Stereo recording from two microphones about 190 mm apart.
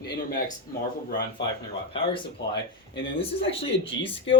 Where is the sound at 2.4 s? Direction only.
65° left (ahead or behind).